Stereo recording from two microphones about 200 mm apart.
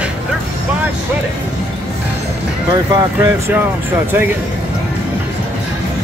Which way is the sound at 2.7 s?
10° right (ahead or behind).